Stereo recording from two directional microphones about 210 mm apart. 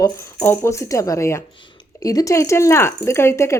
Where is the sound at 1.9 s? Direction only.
15° left (ahead or behind).